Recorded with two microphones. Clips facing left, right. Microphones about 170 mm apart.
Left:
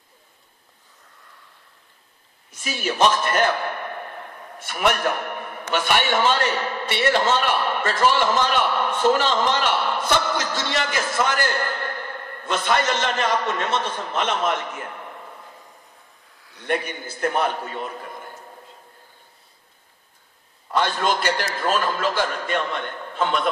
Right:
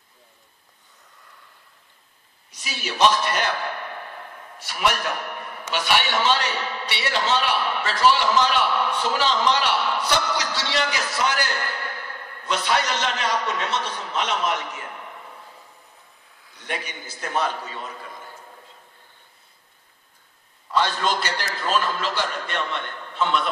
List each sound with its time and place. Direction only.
2.5 s a man's voice: 50° left (ahead or behind)
16.5 s a man's voice: 55° left (ahead or behind)
20.7 s a man's voice: 50° left (ahead or behind)